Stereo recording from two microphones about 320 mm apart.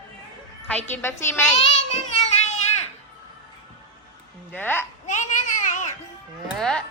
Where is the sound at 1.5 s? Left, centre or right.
Left.